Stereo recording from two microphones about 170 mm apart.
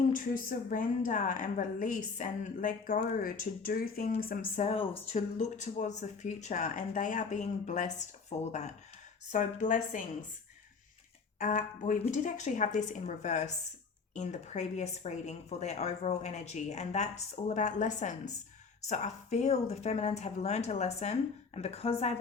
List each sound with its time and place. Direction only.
0.1 s speech: 55° left (ahead or behind)
4.6 s speech: 35° left (ahead or behind)
11.3 s speech: 50° left (ahead or behind)